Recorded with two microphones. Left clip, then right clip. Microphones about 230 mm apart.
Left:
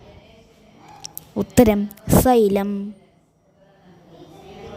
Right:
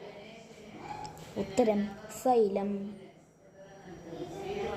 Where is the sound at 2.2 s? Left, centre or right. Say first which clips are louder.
Left 8 dB; left.